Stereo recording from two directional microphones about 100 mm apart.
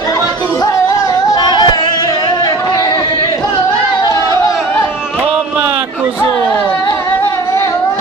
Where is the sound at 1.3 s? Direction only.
45° left (ahead or behind).